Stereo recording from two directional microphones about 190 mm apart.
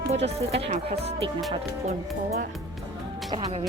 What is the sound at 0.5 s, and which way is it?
Speech, 30° right (ahead or behind).